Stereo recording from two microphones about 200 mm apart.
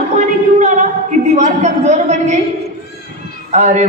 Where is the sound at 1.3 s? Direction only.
35° right (ahead or behind).